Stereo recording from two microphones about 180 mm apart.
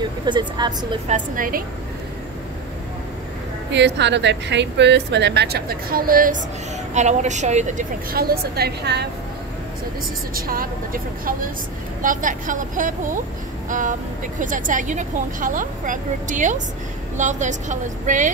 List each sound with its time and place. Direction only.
0.2 s a woman's voice: 25° right (ahead or behind)
1.0 s speech: 45° right (ahead or behind)
3.7 s a woman's voice: 75° right (ahead or behind); by 6.4 s 50° right (ahead or behind)
6.9 s a woman's voice: 40° right (ahead or behind); by 9.0 s 65° right (ahead or behind)
10.3 s speech: 55° right (ahead or behind)